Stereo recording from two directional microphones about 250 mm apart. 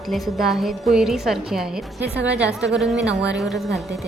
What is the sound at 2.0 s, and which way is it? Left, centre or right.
Speech, right.